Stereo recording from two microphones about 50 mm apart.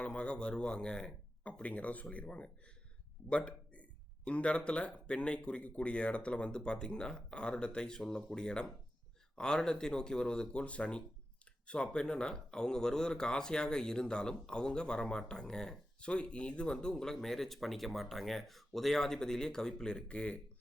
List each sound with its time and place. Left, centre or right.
0.0 s speech: left
1.5 s speech: left